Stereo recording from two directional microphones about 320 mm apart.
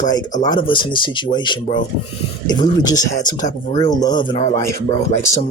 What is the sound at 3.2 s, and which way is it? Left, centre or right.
Speech, left.